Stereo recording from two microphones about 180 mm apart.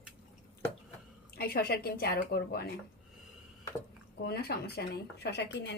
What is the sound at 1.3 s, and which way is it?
Speech, 60° left (ahead or behind).